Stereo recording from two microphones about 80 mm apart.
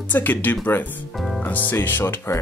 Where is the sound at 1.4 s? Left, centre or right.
Left.